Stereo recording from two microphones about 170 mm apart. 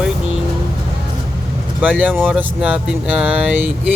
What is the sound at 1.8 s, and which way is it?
Speech, 10° right (ahead or behind).